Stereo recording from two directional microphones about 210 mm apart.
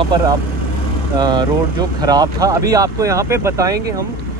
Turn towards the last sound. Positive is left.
turn(degrees=-15)  # may be behind; listen again after turning